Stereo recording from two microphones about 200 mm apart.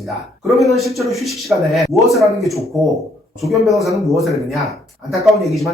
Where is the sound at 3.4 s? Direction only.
Centre (ahead or behind).